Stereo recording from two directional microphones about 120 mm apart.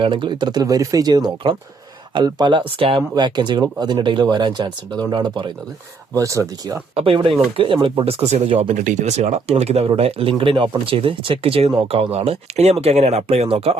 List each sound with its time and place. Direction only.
0.0 s speech: 40° right (ahead or behind)
3.2 s speech: 40° right (ahead or behind)
6.1 s speech: 25° right (ahead or behind)
6.9 s speech: 50° right (ahead or behind)
8.6 s speech: 90° right; by 13.7 s 55° right (ahead or behind)